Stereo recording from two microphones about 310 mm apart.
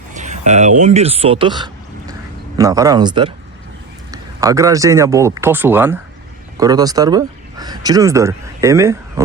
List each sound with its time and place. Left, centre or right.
0.1 s speech: right